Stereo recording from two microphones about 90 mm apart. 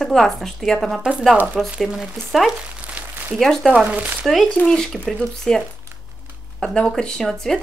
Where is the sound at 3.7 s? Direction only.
10° right (ahead or behind).